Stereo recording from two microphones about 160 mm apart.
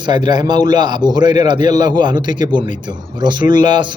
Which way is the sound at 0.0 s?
30° right (ahead or behind).